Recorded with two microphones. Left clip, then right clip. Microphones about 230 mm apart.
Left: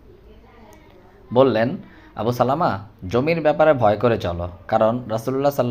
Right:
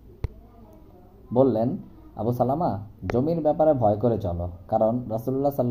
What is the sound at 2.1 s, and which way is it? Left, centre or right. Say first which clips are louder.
A man's voice: left 5 dB; left.